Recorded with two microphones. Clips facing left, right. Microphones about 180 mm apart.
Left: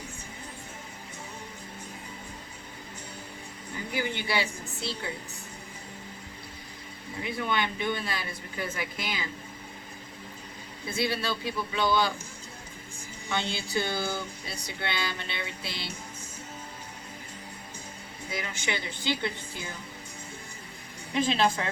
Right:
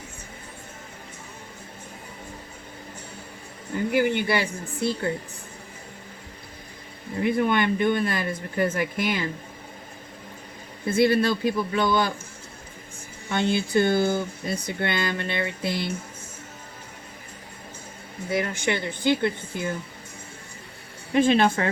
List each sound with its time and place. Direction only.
3.9 s speech: 55° right (ahead or behind)
7.2 s speech: 55° right (ahead or behind)
10.8 s speech: 55° right (ahead or behind)
13.3 s speech: 50° right (ahead or behind)
18.3 s speech: 55° right (ahead or behind)
21.1 s speech: 55° right (ahead or behind)